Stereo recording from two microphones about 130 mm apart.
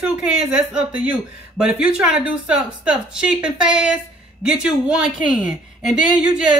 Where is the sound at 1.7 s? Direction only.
5° right (ahead or behind).